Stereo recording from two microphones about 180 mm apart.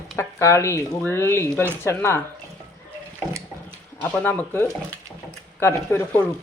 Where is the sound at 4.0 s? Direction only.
10° left (ahead or behind).